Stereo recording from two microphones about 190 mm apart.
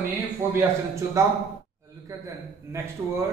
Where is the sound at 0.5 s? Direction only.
15° right (ahead or behind).